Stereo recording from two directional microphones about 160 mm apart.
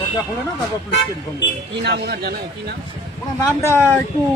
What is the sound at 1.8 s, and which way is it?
Speech, 90° right.